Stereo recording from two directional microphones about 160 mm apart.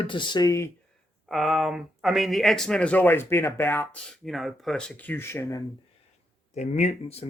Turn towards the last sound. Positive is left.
turn(degrees=40)  # may be behind; listen again after turning